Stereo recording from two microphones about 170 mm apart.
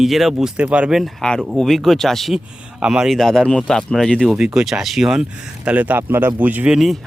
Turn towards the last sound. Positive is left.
turn(degrees=-5)  # may be behind; listen again after turning